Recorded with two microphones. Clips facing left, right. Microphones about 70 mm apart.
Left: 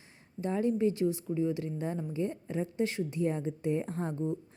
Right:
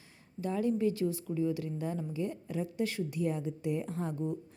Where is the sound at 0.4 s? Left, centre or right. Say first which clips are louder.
Left 2 dB; left.